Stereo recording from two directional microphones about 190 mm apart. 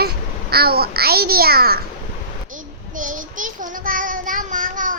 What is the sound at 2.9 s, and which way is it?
Child singing, 45° right (ahead or behind).